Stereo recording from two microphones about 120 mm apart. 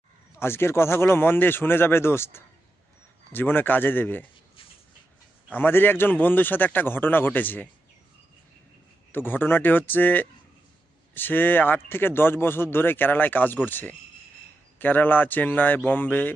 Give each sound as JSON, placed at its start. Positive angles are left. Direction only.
{"t": 0.3, "sound": "speech", "side_deg": 20}
{"t": 5.5, "sound": "speech", "side_deg": 15}
{"t": 9.1, "sound": "speech", "side_deg": 15}